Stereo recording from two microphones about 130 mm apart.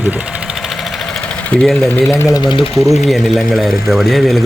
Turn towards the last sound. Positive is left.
turn(degrees=0)  # may be behind; listen again after turning